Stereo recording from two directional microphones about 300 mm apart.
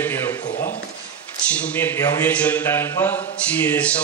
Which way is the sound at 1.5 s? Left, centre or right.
Centre.